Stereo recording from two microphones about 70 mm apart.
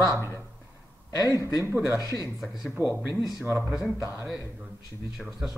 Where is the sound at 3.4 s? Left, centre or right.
Right.